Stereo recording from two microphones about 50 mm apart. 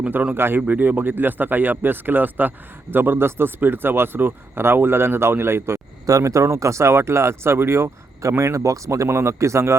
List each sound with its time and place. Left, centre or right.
0.1 s speech: right
0.3 s speech: right
0.7 s speech: right
6.2 s speech: right
8.2 s speech: right